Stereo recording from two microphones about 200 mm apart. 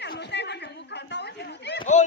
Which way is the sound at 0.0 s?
55° left (ahead or behind).